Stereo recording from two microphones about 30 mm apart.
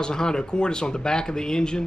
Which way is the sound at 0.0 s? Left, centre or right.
Left.